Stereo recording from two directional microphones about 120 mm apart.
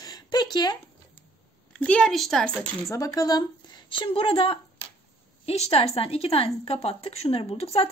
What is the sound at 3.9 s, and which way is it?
A woman's voice, 45° left (ahead or behind).